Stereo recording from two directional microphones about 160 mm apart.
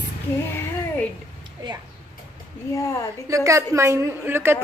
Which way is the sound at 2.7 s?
20° left (ahead or behind).